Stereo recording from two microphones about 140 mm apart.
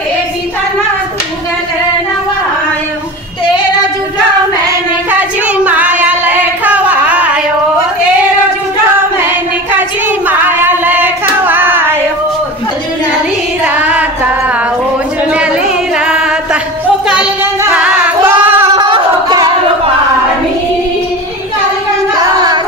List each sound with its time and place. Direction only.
5.6 s child singing: 10° right (ahead or behind)
9.2 s child singing: 15° right (ahead or behind)
13.7 s music: 10° right (ahead or behind)
16.0 s music: 5° right (ahead or behind)
17.1 s child singing: 10° right (ahead or behind)
18.7 s a sound: 35° right (ahead or behind)